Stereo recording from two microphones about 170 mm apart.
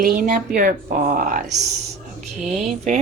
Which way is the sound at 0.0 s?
55° right (ahead or behind).